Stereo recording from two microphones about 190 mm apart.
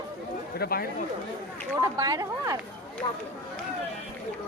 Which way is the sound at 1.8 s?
20° right (ahead or behind).